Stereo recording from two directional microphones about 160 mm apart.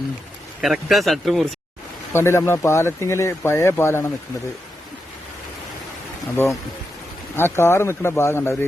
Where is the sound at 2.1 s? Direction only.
15° left (ahead or behind).